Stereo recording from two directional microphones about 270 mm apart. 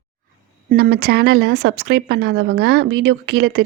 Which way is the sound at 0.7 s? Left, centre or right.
Right.